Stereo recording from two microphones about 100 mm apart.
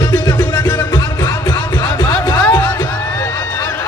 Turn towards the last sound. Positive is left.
turn(degrees=45)  # may be behind; listen again after turning